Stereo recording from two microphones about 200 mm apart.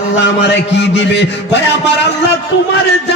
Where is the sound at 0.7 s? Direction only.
60° left (ahead or behind).